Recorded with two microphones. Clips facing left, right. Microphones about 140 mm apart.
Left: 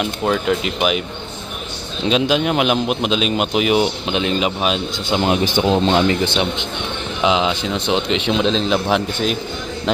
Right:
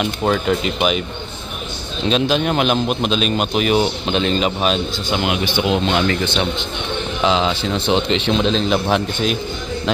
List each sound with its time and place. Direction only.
0.0 s a man's voice: centre (ahead or behind)
2.0 s a man's voice: 15° left (ahead or behind)
5.1 s speech: 35° left (ahead or behind)
7.2 s a man's voice: 10° left (ahead or behind)